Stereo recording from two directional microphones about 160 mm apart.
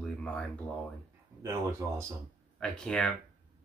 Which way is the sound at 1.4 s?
15° right (ahead or behind).